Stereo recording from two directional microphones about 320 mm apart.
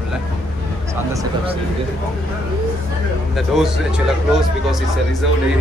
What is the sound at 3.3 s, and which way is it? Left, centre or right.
Speech, centre.